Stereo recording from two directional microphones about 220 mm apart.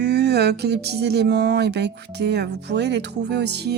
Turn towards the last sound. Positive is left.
turn(degrees=-50)  # may be behind; listen again after turning